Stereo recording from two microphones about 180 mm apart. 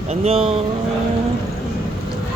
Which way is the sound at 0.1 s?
35° right (ahead or behind).